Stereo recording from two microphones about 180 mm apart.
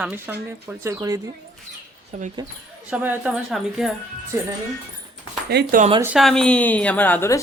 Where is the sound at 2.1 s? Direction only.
40° right (ahead or behind).